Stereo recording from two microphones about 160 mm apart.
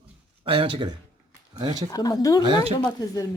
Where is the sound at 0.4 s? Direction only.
30° right (ahead or behind).